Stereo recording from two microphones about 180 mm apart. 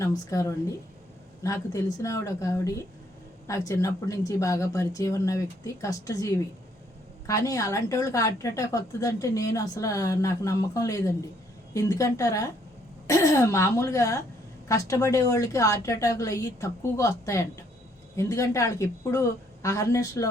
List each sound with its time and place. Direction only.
0.0 s a woman's voice: 20° left (ahead or behind)